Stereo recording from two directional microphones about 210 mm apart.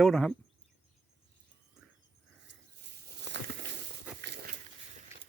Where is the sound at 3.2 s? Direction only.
55° right (ahead or behind).